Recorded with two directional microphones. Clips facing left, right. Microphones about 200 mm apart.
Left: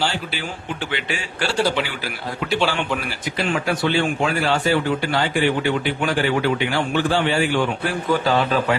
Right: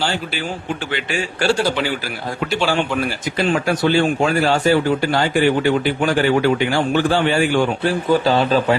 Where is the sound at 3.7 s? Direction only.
40° right (ahead or behind).